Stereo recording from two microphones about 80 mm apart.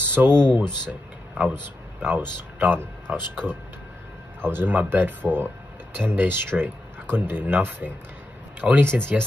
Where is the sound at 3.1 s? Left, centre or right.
Centre.